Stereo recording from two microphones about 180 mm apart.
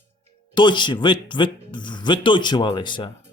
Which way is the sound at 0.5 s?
25° left (ahead or behind).